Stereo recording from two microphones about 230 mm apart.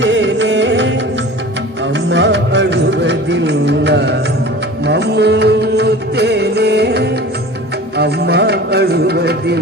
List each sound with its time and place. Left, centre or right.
0.0 s music: right
2.0 s music: right